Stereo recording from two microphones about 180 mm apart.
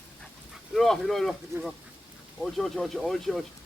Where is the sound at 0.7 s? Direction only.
Centre (ahead or behind).